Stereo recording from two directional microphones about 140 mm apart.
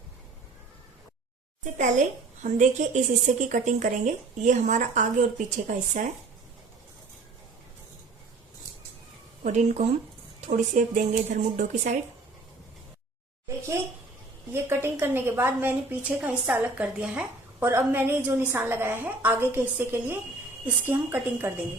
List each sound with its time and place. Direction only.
1.6 s a woman's voice: 65° right (ahead or behind)
9.4 s a woman's voice: 60° right (ahead or behind)
11.2 s a woman's voice: 55° right (ahead or behind)
14.5 s a woman's voice: 15° right (ahead or behind)